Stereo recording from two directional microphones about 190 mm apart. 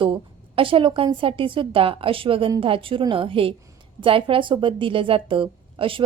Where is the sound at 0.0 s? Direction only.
25° right (ahead or behind).